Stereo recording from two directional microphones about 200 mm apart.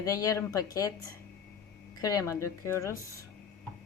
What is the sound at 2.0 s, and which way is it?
A woman's voice, 15° left (ahead or behind).